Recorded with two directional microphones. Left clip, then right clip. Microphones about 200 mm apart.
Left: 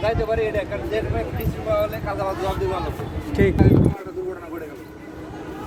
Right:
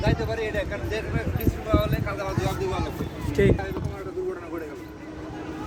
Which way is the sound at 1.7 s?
10° left (ahead or behind).